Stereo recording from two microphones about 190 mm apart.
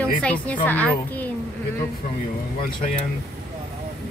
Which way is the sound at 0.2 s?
5° left (ahead or behind).